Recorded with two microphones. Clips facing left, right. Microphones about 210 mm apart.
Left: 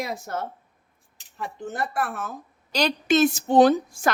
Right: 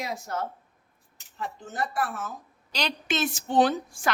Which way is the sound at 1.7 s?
60° left (ahead or behind).